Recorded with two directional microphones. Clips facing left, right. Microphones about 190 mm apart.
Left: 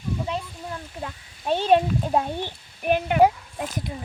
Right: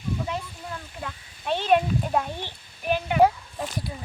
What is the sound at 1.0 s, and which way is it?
Speech, 35° left (ahead or behind).